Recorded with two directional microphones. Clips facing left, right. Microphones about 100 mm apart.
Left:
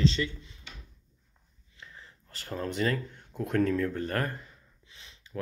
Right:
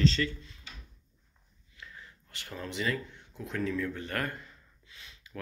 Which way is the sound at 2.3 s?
40° left (ahead or behind).